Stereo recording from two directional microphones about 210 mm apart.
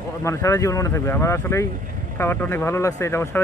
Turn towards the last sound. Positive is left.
turn(degrees=10)  # may be behind; listen again after turning